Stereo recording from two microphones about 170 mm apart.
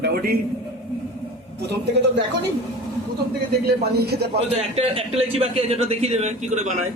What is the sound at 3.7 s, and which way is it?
Speech, 70° right (ahead or behind).